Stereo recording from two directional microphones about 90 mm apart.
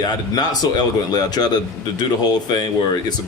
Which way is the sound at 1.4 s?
50° left (ahead or behind).